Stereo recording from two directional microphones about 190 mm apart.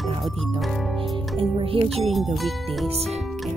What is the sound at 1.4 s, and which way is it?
Speech, 30° right (ahead or behind).